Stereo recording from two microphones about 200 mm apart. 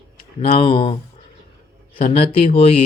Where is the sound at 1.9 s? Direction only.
30° left (ahead or behind).